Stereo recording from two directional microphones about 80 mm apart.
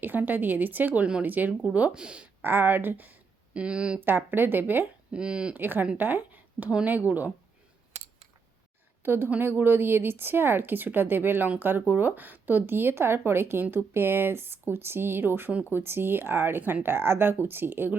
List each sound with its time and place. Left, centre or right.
0.0 s speech: right
2.4 s speech: right
4.0 s speech: right
5.1 s speech: centre
5.5 s a woman's voice: right
9.0 s speech: right